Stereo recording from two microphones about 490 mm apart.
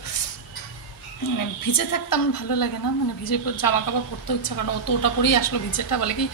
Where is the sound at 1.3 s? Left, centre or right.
Left.